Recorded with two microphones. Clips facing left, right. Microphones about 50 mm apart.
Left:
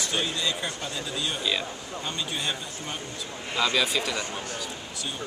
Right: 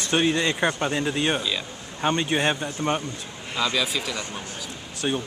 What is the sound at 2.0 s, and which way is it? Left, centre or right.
Speech, right.